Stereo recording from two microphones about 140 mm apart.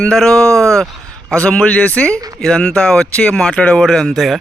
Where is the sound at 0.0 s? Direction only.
5° left (ahead or behind).